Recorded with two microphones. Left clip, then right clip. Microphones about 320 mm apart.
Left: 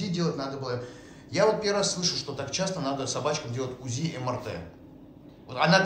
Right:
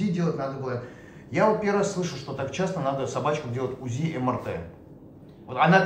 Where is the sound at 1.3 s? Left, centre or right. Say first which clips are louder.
Right 1 dB; centre.